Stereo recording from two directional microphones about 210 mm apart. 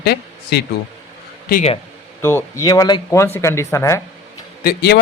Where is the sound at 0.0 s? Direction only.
50° left (ahead or behind).